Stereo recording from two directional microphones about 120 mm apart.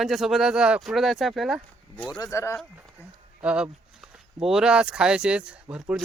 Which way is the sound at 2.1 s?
25° left (ahead or behind).